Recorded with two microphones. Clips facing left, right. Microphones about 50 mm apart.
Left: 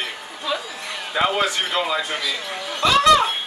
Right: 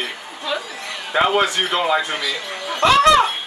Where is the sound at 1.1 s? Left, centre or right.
Right.